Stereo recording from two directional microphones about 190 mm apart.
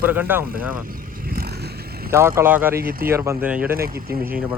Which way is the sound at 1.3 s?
55° right (ahead or behind).